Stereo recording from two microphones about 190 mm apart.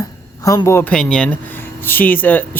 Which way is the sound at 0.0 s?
15° left (ahead or behind).